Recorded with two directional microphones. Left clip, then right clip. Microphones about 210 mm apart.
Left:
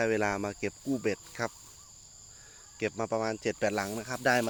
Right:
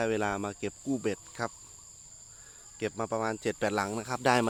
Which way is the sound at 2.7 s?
Centre (ahead or behind).